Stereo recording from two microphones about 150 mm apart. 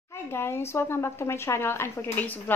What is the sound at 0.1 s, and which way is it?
Speech, 15° left (ahead or behind).